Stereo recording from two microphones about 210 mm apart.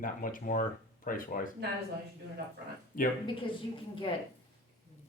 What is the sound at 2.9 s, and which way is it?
Speech, 40° left (ahead or behind).